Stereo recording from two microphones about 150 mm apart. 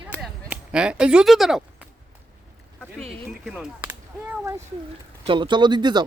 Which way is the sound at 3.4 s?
Centre (ahead or behind).